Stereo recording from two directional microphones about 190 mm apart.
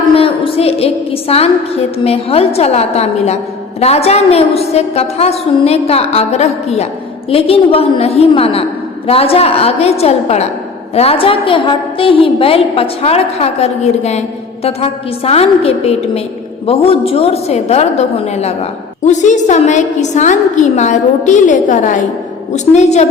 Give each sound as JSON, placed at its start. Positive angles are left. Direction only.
{"t": 0.1, "sound": "a woman's voice", "side_deg": 30}